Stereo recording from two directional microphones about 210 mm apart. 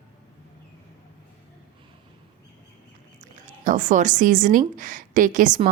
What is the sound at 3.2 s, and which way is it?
A woman's voice, 35° right (ahead or behind).